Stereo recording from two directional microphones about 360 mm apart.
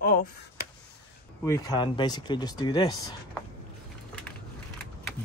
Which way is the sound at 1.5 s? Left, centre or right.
Centre.